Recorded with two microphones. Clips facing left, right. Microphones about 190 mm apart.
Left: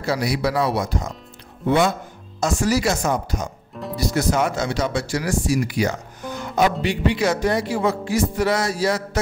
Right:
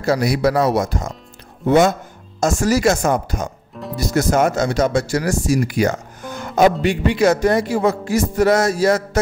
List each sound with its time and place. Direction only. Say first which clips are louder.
0.0 s speech: right 5 dB; 45° right (ahead or behind)